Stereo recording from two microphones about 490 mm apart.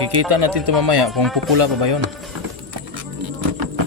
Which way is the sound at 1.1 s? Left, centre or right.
Centre.